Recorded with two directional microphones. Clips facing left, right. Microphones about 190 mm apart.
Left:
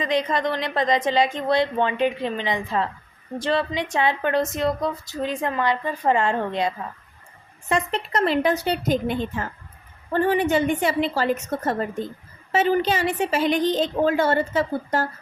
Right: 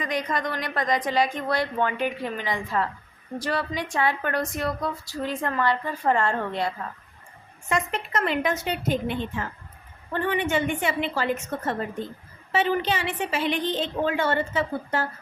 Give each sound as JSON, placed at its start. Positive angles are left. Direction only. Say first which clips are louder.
{"t": 0.0, "sound": "a woman's voice", "louder": "left 5 dB", "side_deg": 25}
{"t": 7.7, "sound": "a woman's voice", "louder": "left 3 dB", "side_deg": 30}